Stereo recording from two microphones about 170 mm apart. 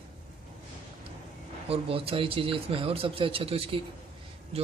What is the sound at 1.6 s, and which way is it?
Speech, 35° right (ahead or behind).